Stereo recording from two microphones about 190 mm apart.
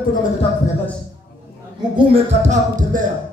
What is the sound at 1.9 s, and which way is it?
Speech, 35° right (ahead or behind).